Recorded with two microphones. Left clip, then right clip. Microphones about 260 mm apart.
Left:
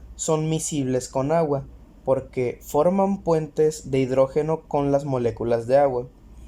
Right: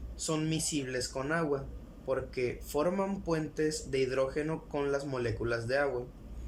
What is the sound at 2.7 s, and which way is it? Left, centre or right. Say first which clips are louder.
Speech: left 13 dB; left.